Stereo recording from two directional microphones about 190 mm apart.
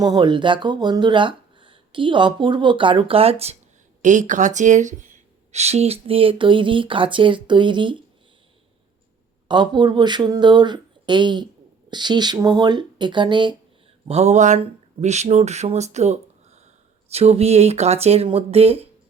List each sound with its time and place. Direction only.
0.0 s speech: 20° right (ahead or behind)
9.5 s speech: 25° right (ahead or behind)
14.1 s speech: 35° right (ahead or behind)